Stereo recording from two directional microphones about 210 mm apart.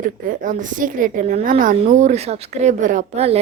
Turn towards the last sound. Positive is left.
turn(degrees=-35)  # may be behind; listen again after turning